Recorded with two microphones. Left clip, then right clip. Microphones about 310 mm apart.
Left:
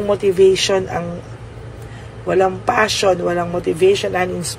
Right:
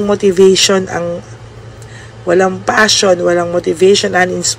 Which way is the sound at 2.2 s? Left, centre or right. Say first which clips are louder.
Right 4 dB; centre.